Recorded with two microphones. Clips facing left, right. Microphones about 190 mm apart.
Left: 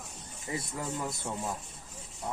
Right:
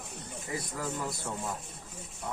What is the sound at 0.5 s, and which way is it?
Speech, 25° left (ahead or behind).